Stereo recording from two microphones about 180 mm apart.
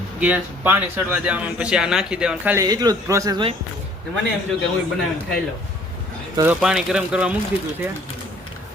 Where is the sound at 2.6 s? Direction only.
20° right (ahead or behind).